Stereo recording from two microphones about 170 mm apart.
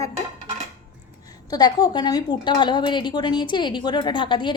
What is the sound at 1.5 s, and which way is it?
A woman's voice, 25° left (ahead or behind).